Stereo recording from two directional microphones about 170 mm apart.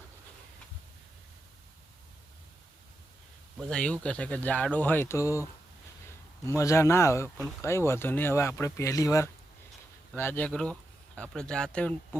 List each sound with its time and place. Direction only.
3.6 s speech: 5° left (ahead or behind)